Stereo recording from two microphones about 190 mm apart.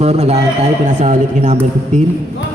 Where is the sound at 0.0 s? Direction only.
35° right (ahead or behind).